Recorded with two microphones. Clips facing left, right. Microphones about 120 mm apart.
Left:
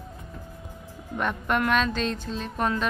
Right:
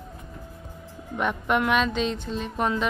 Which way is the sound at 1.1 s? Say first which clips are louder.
Right 2 dB; 15° right (ahead or behind).